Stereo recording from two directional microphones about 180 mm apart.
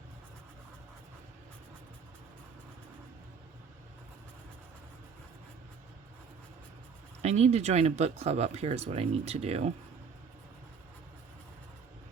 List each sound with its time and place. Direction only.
7.2 s speech: 35° right (ahead or behind)